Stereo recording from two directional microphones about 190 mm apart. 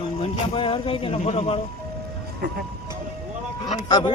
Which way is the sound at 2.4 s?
55° right (ahead or behind).